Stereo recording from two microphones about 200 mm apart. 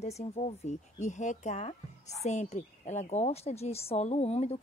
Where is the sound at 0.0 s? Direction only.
35° left (ahead or behind).